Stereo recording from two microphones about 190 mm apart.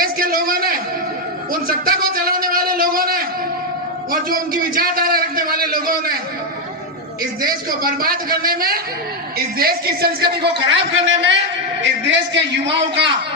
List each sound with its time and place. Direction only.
0.0 s a sound: 50° right (ahead or behind)
1.6 s a man's voice: 50° right (ahead or behind)
7.4 s a man's voice: 50° right (ahead or behind)
10.7 s a man's voice: 70° right (ahead or behind)